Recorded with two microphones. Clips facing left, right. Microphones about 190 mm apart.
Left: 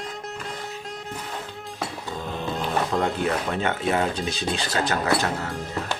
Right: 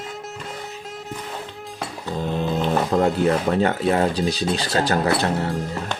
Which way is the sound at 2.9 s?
35° right (ahead or behind).